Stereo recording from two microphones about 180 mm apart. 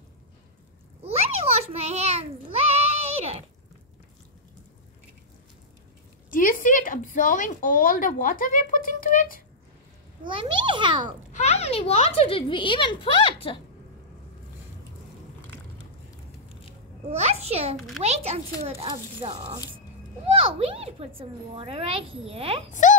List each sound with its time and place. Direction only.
1.6 s a sound: 35° right (ahead or behind)
6.3 s speech: 50° left (ahead or behind)
10.2 s a child's voice: 25° right (ahead or behind)
11.3 s speech: 40° left (ahead or behind)
17.2 s a woman's voice: 35° right (ahead or behind)
22.7 s speech: 45° left (ahead or behind)